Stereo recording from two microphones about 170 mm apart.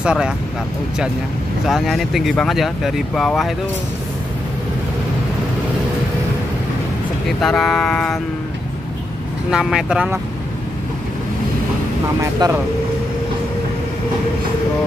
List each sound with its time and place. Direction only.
0.0 s speech: 5° right (ahead or behind)
1.7 s speech: centre (ahead or behind)
7.2 s speech: centre (ahead or behind)
9.5 s speech: 5° right (ahead or behind)
12.2 s speech: 20° right (ahead or behind)